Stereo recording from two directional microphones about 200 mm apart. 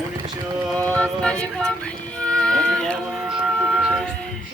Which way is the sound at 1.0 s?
5° left (ahead or behind).